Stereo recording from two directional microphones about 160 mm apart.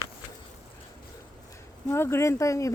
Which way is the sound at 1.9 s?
15° left (ahead or behind).